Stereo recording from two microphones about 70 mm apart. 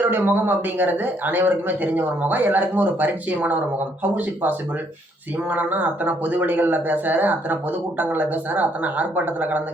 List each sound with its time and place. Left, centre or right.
0.0 s speech: right